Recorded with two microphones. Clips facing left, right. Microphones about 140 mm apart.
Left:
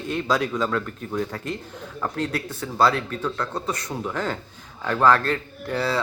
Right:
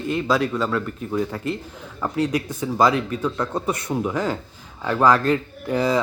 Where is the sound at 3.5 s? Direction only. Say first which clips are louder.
Right 4 dB; 25° right (ahead or behind).